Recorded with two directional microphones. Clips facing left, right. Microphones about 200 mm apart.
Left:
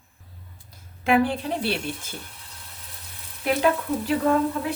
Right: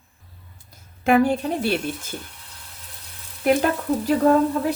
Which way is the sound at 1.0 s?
45° right (ahead or behind).